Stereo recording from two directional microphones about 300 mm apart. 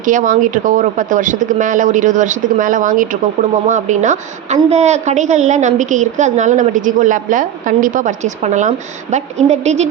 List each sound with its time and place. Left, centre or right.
0.0 s a woman's voice: right